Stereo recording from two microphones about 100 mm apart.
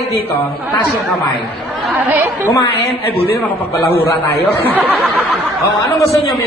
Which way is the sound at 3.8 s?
20° left (ahead or behind).